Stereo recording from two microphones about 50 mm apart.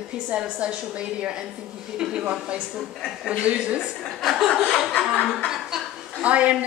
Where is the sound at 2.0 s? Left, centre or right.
Centre.